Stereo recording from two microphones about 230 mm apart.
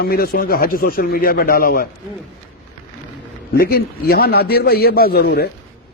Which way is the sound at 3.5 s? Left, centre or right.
Left.